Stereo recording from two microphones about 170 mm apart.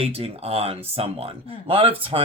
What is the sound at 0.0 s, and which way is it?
Speech, 35° right (ahead or behind).